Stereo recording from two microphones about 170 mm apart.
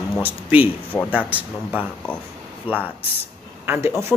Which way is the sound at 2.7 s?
30° left (ahead or behind).